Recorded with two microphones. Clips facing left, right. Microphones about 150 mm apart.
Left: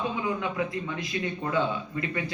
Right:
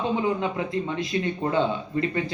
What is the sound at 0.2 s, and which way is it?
Speech, 30° right (ahead or behind).